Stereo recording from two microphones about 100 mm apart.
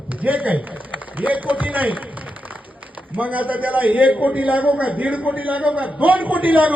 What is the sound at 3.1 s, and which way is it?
A man's voice, 15° right (ahead or behind).